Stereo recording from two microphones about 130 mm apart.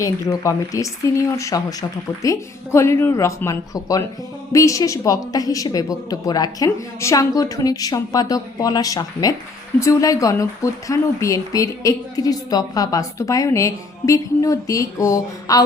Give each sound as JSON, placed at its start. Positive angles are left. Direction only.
{"t": 0.0, "sound": "speech", "side_deg": 25}